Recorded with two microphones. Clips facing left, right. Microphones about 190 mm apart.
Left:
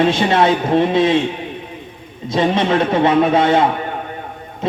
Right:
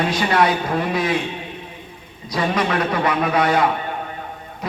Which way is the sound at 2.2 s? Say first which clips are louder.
Left 5 dB; 25° left (ahead or behind).